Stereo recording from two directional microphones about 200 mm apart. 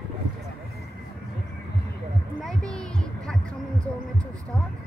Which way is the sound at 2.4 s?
5° left (ahead or behind).